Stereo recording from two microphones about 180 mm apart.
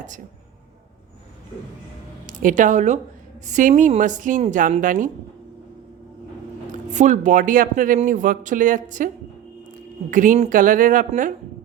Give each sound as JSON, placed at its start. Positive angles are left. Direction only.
{"t": 2.2, "sound": "a woman's voice", "side_deg": -45}
{"t": 6.7, "sound": "speech", "side_deg": -45}
{"t": 10.1, "sound": "speech", "side_deg": -45}